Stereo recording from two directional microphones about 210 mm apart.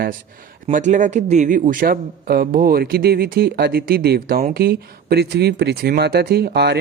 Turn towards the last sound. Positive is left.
turn(degrees=-50)  # may be behind; listen again after turning